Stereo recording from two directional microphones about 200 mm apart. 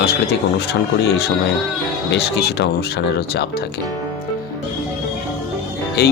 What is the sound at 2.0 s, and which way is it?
Speech, 55° left (ahead or behind).